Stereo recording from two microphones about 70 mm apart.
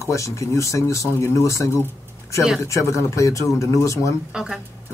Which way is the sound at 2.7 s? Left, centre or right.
Left.